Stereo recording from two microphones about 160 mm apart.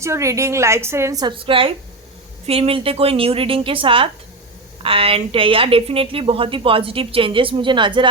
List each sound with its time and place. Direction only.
0.0 s a woman's voice: 20° right (ahead or behind)